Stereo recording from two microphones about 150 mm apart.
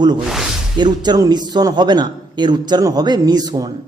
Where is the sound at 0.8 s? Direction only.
30° right (ahead or behind).